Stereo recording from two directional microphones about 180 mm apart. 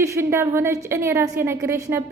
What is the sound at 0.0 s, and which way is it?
A woman's voice, 15° right (ahead or behind).